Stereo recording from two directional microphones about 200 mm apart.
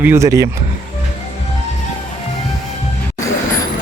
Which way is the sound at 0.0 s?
15° right (ahead or behind).